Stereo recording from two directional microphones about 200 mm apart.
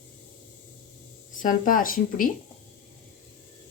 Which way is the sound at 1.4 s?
40° left (ahead or behind).